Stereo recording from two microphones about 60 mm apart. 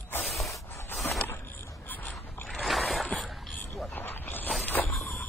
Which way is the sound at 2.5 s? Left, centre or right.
Centre.